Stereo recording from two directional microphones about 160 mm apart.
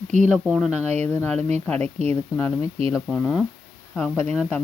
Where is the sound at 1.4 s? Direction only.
45° right (ahead or behind).